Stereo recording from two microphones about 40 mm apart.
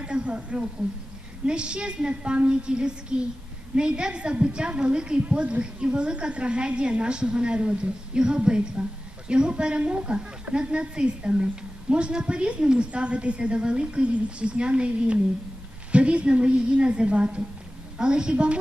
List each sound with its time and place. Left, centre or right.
0.0 s a woman's voice: right